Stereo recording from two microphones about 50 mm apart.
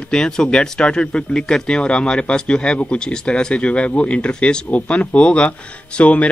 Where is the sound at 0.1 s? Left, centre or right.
Centre.